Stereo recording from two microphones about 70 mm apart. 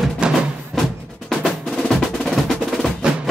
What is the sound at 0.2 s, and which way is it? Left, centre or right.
Music, centre.